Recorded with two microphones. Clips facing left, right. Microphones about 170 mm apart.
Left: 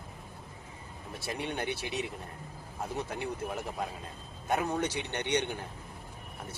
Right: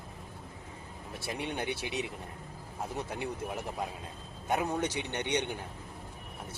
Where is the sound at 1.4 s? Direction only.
15° right (ahead or behind).